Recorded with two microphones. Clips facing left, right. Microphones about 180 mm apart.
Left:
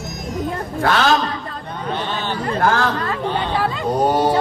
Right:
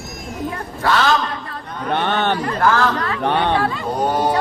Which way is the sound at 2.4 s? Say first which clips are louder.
Right 1 dB; 30° left (ahead or behind).